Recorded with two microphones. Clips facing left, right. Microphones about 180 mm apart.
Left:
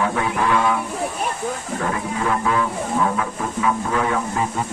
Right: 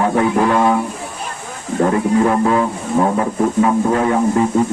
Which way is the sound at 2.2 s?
40° right (ahead or behind).